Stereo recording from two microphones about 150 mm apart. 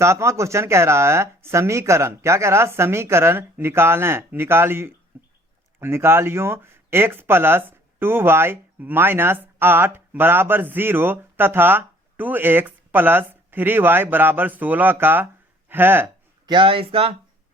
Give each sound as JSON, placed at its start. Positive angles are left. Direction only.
{"t": 0.0, "sound": "speech", "side_deg": -20}
{"t": 16.5, "sound": "speech", "side_deg": -35}